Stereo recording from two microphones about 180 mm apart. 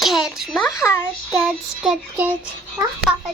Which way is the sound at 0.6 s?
15° left (ahead or behind).